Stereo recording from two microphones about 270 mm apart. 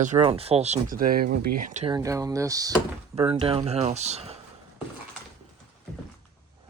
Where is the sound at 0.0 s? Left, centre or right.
Right.